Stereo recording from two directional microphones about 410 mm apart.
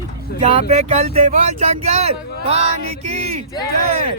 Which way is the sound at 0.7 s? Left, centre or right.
Centre.